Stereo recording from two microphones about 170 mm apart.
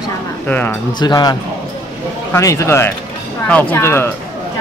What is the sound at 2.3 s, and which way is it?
A man's voice, 15° left (ahead or behind).